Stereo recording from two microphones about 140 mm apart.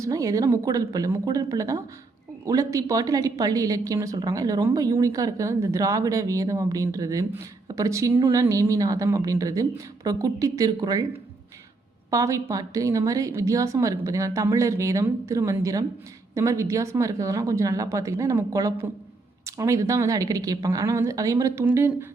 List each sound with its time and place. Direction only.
0.0 s a woman's voice: 25° right (ahead or behind)
12.1 s a woman's voice: 25° right (ahead or behind)